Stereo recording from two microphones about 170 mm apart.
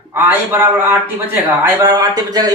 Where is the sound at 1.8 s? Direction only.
20° right (ahead or behind).